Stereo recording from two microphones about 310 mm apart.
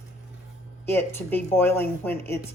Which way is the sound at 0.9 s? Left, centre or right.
Centre.